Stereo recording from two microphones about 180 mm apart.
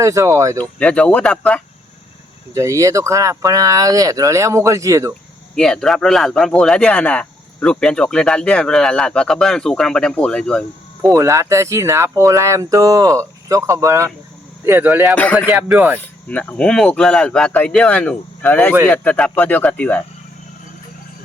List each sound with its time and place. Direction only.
0.0 s speech: 15° right (ahead or behind)
0.6 s speech: 5° left (ahead or behind)
2.6 s speech: 15° right (ahead or behind)
5.5 s speech: 5° left (ahead or behind)
11.1 s speech: 15° right (ahead or behind)
15.1 s speech: 10° left (ahead or behind)
15.4 s speech: 5° right (ahead or behind)
16.0 s speech: 10° left (ahead or behind)